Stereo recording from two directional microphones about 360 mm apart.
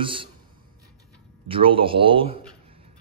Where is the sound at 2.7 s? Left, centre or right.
Centre.